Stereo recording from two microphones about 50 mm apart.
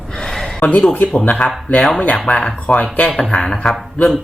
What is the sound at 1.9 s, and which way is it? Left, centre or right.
Speech, left.